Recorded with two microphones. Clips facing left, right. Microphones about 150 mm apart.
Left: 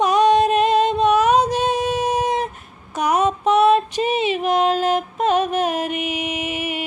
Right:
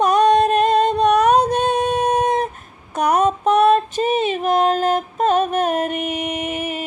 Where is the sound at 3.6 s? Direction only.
45° right (ahead or behind).